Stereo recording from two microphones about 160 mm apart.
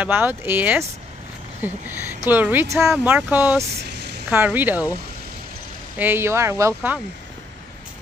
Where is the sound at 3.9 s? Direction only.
90° right.